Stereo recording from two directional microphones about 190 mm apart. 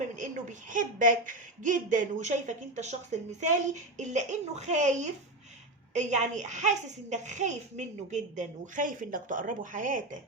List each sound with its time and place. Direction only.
0.2 s a woman's voice: 40° right (ahead or behind)